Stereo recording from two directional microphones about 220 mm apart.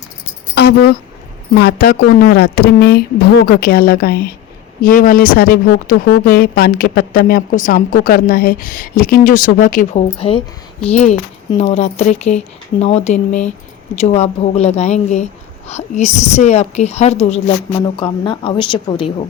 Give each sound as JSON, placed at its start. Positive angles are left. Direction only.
{"t": 0.6, "sound": "keys jangling", "side_deg": 50}
{"t": 1.5, "sound": "a woman's voice", "side_deg": 45}
{"t": 10.2, "sound": "a woman's voice", "side_deg": 25}